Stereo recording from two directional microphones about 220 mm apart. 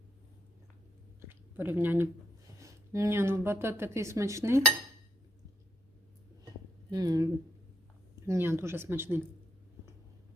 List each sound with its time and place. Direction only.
1.3 s a sound: 10° right (ahead or behind)
2.6 s speech: 15° right (ahead or behind)
6.9 s speech: 15° right (ahead or behind)
8.3 s speech: 10° right (ahead or behind)